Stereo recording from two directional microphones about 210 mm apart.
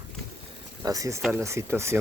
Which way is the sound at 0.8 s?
15° right (ahead or behind).